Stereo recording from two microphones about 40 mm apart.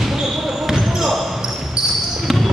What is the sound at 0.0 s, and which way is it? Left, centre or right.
Basketball bounce, centre.